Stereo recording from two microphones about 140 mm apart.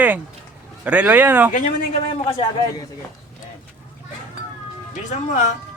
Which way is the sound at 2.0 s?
40° left (ahead or behind).